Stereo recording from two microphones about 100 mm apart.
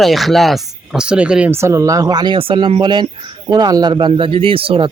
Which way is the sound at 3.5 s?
40° right (ahead or behind).